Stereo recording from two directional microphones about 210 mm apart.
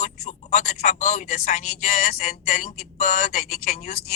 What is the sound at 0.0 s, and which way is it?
A man's voice, 35° left (ahead or behind).